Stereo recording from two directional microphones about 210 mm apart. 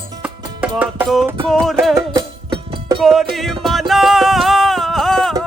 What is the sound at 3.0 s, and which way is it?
Music, centre (ahead or behind).